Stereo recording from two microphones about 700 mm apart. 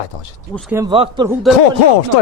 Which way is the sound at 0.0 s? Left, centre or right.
Left.